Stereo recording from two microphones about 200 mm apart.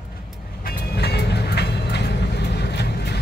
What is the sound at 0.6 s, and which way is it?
Vehicle, 55° left (ahead or behind).